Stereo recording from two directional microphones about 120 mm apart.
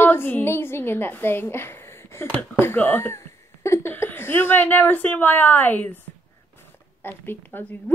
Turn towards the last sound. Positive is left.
turn(degrees=15)  # may be behind; listen again after turning